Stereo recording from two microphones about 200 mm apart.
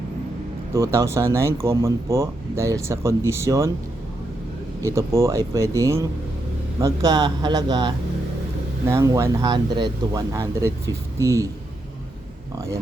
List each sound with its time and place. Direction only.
0.7 s speech: 15° right (ahead or behind)
4.8 s speech: 15° right (ahead or behind)
12.5 s speech: 15° right (ahead or behind)